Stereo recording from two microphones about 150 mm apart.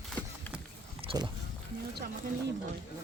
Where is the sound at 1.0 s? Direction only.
30° right (ahead or behind).